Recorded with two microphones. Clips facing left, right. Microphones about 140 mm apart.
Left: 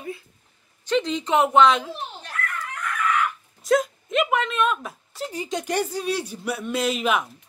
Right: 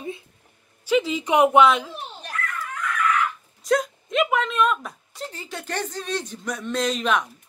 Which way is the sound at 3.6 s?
Centre (ahead or behind).